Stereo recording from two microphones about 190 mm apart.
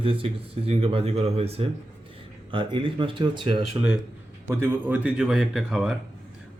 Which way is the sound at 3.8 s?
15° right (ahead or behind).